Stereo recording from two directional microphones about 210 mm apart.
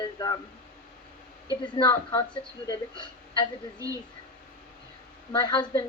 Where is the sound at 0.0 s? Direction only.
20° left (ahead or behind).